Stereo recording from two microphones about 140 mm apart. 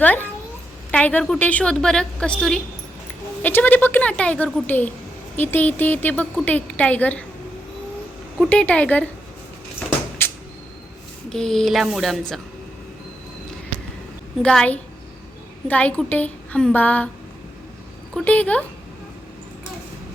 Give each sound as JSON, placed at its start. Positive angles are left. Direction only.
{"t": 0.0, "sound": "speech", "side_deg": 10}
{"t": 8.4, "sound": "speech", "side_deg": 10}
{"t": 10.2, "sound": "a sound", "side_deg": 15}
{"t": 11.3, "sound": "speech", "side_deg": 5}
{"t": 14.4, "sound": "speech", "side_deg": 10}
{"t": 18.1, "sound": "speech", "side_deg": 10}